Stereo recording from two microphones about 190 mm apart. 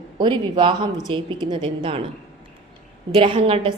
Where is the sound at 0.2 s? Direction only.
25° right (ahead or behind).